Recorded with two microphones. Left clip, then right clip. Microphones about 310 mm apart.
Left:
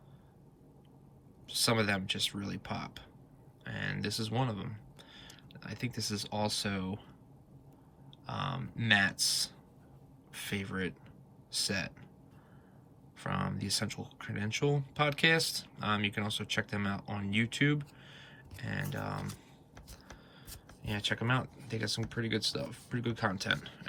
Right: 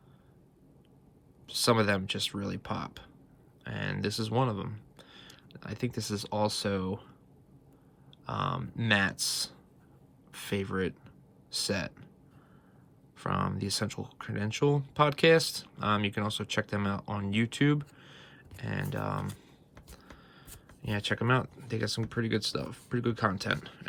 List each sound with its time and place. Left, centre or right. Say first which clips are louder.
1.5 s speech: right 4 dB; centre
8.3 s speech: right 5 dB; centre
13.1 s speech: right 5 dB; centre
20.4 s speech: right 4 dB; centre